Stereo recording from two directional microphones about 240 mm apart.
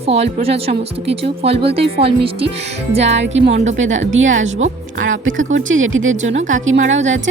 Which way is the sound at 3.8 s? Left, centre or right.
Right.